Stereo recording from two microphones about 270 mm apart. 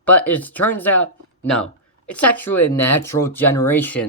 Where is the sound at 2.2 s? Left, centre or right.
Left.